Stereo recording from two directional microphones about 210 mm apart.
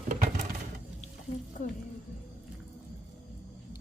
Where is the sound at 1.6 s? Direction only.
35° left (ahead or behind).